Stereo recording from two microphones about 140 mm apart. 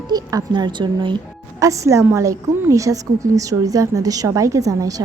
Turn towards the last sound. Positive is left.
turn(degrees=-25)  # may be behind; listen again after turning